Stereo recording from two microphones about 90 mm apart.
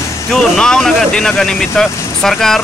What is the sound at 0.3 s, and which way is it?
Speech, 5° left (ahead or behind).